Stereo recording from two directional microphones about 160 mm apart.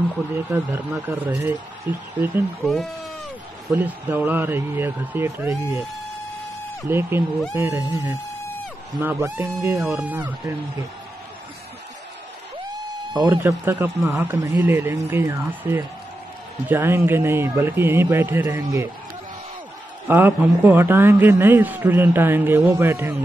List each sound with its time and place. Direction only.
0.5 s a man's voice: 15° right (ahead or behind)
2.6 s speech: centre (ahead or behind)
3.7 s a man's voice: 10° right (ahead or behind)
6.9 s a man's voice: 15° right (ahead or behind)
13.2 s a man's voice: 10° right (ahead or behind)
20.1 s a man's voice: 10° right (ahead or behind)